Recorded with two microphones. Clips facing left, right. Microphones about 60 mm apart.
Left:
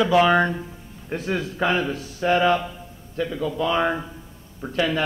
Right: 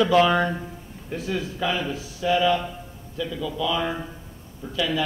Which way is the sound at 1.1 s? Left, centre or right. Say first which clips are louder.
Left 2 dB; left.